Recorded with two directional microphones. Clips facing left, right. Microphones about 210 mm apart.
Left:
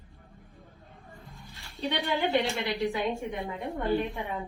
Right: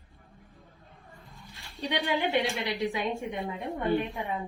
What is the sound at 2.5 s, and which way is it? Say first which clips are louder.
A woman's voice: left 1 dB; 15° right (ahead or behind).